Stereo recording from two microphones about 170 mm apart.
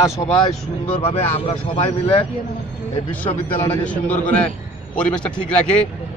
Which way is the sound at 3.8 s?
10° left (ahead or behind).